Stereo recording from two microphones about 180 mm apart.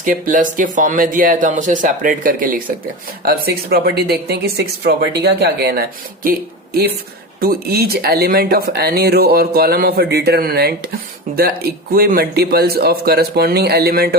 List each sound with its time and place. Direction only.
0.0 s speech: 50° right (ahead or behind)
3.2 s speech: 60° right (ahead or behind)
7.4 s speech: 60° right (ahead or behind)